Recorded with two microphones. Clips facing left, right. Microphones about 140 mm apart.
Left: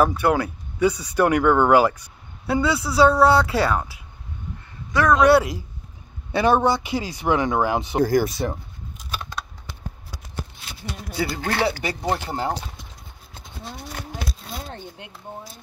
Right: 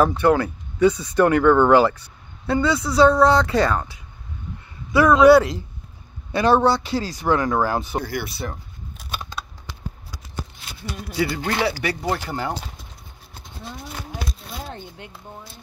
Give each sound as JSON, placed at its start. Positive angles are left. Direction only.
{"t": 0.2, "sound": "speech", "side_deg": 10}
{"t": 6.3, "sound": "speech", "side_deg": 15}
{"t": 8.0, "sound": "speech", "side_deg": 40}
{"t": 11.1, "sound": "speech", "side_deg": 35}